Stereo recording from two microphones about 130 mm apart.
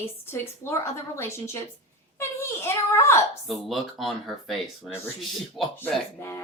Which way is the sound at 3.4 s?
Centre (ahead or behind).